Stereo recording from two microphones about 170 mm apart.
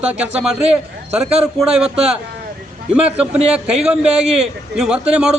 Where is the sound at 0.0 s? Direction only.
5° right (ahead or behind).